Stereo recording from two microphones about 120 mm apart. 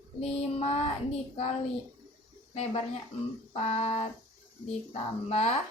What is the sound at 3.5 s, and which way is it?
A woman's voice, 65° left (ahead or behind).